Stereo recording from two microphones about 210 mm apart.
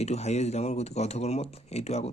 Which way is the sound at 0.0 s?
30° left (ahead or behind).